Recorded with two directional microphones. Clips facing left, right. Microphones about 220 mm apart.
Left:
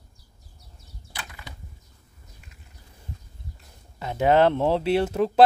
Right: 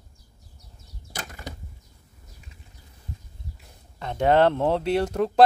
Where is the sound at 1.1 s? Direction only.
45° right (ahead or behind).